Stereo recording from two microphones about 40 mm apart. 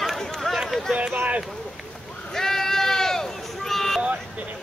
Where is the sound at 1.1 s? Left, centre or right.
Right.